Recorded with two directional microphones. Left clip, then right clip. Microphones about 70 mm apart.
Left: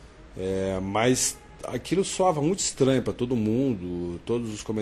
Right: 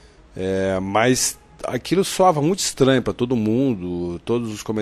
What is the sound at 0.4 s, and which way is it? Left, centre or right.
Speech, right.